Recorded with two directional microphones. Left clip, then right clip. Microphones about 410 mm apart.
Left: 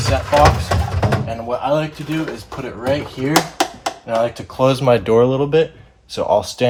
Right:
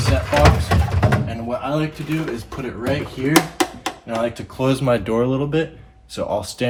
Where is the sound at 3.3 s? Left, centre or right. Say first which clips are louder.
Left 1 dB; centre.